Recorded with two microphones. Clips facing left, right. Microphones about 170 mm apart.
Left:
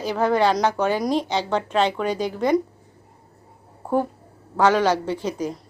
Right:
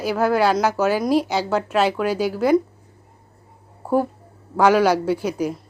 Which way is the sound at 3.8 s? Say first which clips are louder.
Right 2 dB; 5° right (ahead or behind).